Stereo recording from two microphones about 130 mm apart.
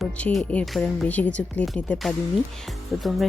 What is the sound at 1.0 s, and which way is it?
Speech, 10° left (ahead or behind).